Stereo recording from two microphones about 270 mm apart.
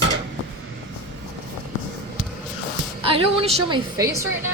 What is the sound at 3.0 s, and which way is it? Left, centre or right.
A woman's voice, centre.